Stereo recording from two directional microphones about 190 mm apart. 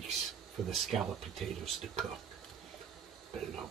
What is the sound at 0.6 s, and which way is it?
Speech, centre (ahead or behind).